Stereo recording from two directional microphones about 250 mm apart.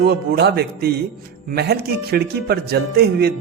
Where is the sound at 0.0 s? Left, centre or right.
Right.